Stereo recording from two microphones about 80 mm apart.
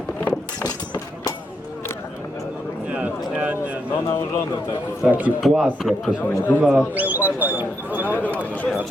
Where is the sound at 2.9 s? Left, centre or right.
Centre.